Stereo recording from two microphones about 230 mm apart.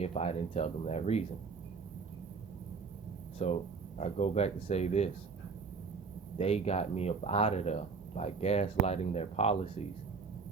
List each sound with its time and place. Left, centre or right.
0.0 s speech: left
3.3 s speech: left
6.3 s speech: left